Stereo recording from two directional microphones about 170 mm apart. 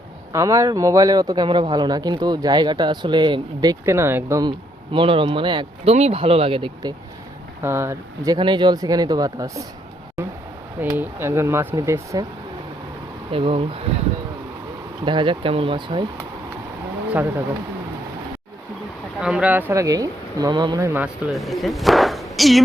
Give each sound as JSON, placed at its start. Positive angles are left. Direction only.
{"t": 0.3, "sound": "a man's voice", "side_deg": -20}
{"t": 4.9, "sound": "speech", "side_deg": -30}
{"t": 7.6, "sound": "a man's voice", "side_deg": -15}
{"t": 10.9, "sound": "speech", "side_deg": -15}
{"t": 13.3, "sound": "speech", "side_deg": -35}
{"t": 15.0, "sound": "a man's voice", "side_deg": -30}
{"t": 17.1, "sound": "speech", "side_deg": -10}
{"t": 19.2, "sound": "a man's voice", "side_deg": -5}
{"t": 20.7, "sound": "speech", "side_deg": -15}
{"t": 21.3, "sound": "speech", "side_deg": 0}